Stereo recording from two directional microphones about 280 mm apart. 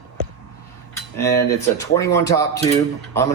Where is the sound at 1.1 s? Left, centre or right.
Centre.